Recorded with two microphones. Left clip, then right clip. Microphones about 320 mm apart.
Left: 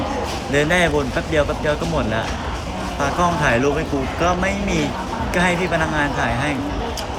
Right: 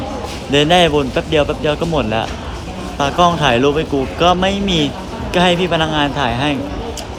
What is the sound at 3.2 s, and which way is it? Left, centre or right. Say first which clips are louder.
Speech: right 5 dB; centre.